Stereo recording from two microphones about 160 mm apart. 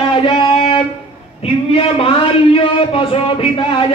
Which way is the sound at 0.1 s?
30° left (ahead or behind).